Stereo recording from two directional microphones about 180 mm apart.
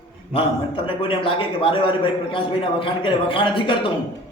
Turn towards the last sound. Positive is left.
turn(degrees=30)  # may be behind; listen again after turning